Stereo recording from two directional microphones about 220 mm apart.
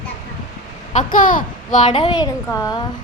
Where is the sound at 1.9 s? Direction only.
20° left (ahead or behind).